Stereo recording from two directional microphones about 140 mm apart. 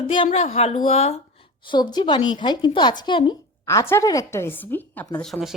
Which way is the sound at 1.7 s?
35° left (ahead or behind).